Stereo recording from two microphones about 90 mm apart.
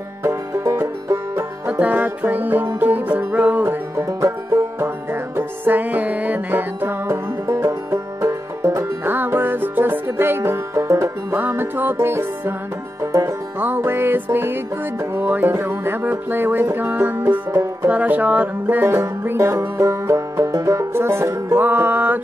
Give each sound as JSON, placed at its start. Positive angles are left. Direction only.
{"t": 0.2, "sound": "music", "side_deg": -25}
{"t": 1.7, "sound": "music", "side_deg": -15}
{"t": 3.9, "sound": "music", "side_deg": -35}
{"t": 13.0, "sound": "music", "side_deg": -40}
{"t": 13.6, "sound": "music", "side_deg": -25}